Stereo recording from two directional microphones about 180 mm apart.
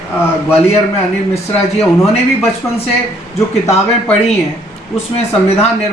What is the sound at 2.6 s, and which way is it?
Speech, 15° left (ahead or behind).